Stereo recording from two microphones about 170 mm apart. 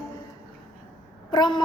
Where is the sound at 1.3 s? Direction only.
25° left (ahead or behind).